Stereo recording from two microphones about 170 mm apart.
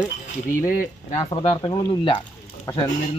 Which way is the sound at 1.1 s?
30° left (ahead or behind).